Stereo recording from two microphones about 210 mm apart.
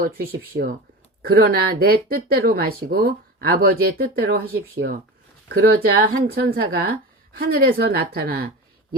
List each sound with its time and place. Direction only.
0.0 s speech: 45° right (ahead or behind)